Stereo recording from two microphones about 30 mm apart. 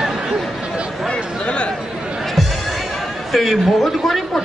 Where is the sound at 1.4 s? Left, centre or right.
Left.